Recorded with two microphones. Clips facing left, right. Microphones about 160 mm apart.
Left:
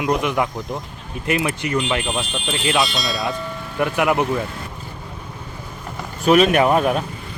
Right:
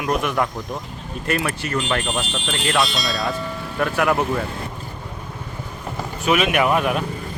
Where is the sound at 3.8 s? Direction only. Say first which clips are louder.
Left 1 dB; 15° left (ahead or behind).